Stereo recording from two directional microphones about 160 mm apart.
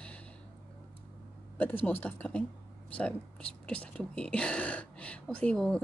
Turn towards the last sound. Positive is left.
turn(degrees=5)  # may be behind; listen again after turning